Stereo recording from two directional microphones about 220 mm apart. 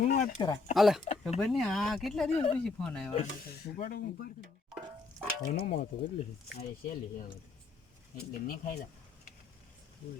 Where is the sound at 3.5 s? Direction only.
45° left (ahead or behind).